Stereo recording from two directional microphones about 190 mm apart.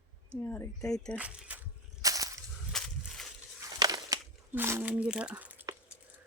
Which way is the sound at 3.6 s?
20° right (ahead or behind).